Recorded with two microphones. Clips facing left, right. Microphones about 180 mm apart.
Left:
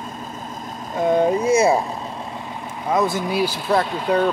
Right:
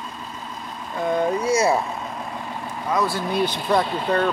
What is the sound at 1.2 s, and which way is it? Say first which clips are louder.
Speech: left 1 dB; 25° left (ahead or behind).